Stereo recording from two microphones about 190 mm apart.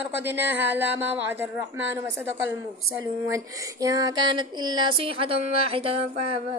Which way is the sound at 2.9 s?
15° right (ahead or behind).